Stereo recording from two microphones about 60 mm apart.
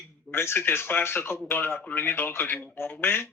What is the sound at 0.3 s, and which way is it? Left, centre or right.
Speech, left.